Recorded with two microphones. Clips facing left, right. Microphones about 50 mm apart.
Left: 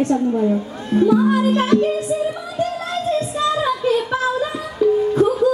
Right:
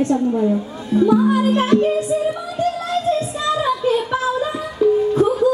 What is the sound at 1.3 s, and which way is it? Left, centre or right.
Music, right.